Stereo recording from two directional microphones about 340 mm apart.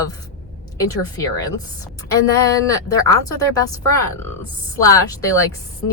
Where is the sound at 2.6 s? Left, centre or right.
Centre.